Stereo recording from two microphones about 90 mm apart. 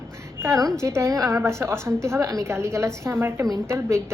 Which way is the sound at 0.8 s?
30° right (ahead or behind).